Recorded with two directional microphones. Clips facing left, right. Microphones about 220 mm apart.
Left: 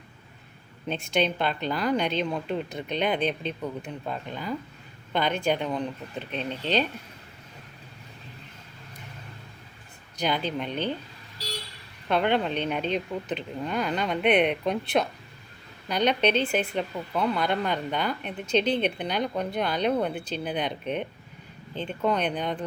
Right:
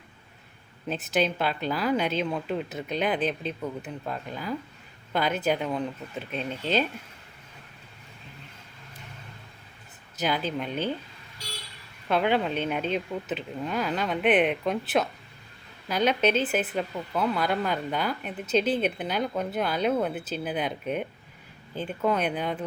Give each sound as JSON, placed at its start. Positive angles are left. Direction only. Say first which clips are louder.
{"t": 0.9, "sound": "speech", "louder": "even", "side_deg": -5}
{"t": 10.2, "sound": "speech", "louder": "even", "side_deg": -5}
{"t": 12.0, "sound": "speech", "louder": "even", "side_deg": 0}